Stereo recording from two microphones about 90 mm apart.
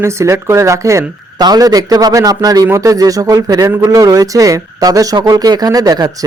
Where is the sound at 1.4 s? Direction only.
45° right (ahead or behind).